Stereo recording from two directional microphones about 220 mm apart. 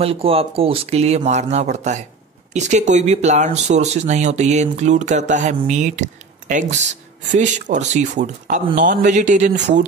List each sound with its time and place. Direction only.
0.0 s speech: 25° right (ahead or behind)
9.6 s speech: 55° right (ahead or behind)